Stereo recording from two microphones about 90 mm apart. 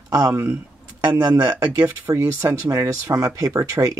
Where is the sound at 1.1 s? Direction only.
45° right (ahead or behind).